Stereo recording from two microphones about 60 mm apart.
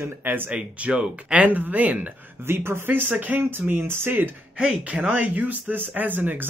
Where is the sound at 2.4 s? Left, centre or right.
Right.